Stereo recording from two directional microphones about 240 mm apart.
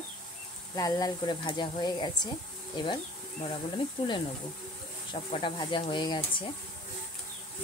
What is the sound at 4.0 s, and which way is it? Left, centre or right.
Speech, left.